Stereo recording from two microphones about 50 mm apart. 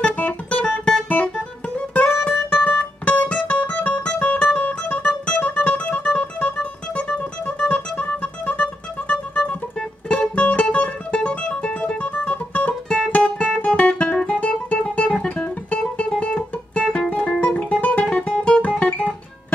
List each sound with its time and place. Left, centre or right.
0.0 s music: left
1.0 s guitar: left
2.0 s music: left
13.6 s guitar: left
14.4 s music: left
18.0 s guitar: centre